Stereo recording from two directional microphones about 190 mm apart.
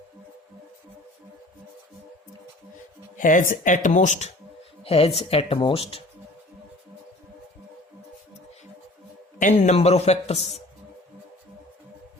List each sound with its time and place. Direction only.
3.2 s speech: 45° left (ahead or behind)
9.4 s speech: 40° left (ahead or behind)